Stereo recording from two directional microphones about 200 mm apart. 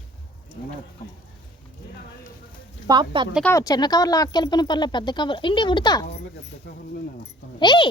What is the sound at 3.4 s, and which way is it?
Speech, 15° left (ahead or behind).